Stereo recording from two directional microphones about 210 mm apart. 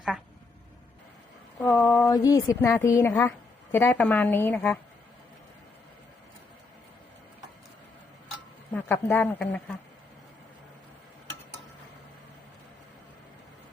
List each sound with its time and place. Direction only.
1.6 s a woman's voice: 15° left (ahead or behind)
8.7 s a woman's voice: 10° left (ahead or behind)